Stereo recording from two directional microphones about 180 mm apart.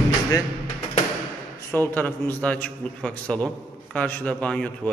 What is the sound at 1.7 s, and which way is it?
A man's voice, 10° left (ahead or behind).